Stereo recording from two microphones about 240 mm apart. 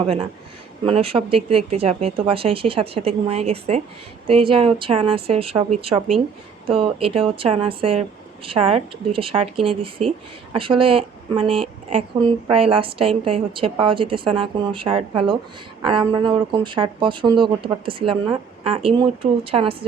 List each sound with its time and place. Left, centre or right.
0.0 s speech: right